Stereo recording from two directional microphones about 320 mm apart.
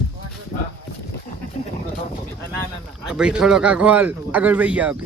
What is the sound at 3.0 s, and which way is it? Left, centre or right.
Speech, centre.